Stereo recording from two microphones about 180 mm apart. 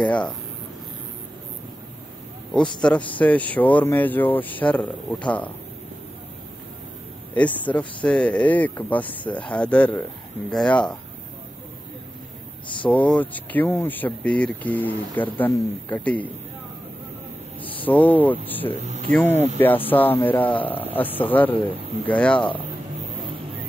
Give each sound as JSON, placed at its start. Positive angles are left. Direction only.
{"t": 0.0, "sound": "speech", "side_deg": 5}
{"t": 2.5, "sound": "speech", "side_deg": 5}
{"t": 7.3, "sound": "speech", "side_deg": 10}
{"t": 12.6, "sound": "speech", "side_deg": 25}
{"t": 12.9, "sound": "speech", "side_deg": 10}
{"t": 17.6, "sound": "speech", "side_deg": 10}
{"t": 18.8, "sound": "speech", "side_deg": -40}
{"t": 19.1, "sound": "speech", "side_deg": 10}